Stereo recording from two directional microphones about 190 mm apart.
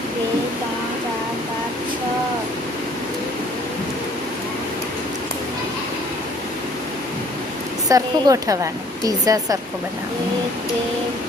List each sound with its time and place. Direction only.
7.9 s a woman's voice: 20° right (ahead or behind)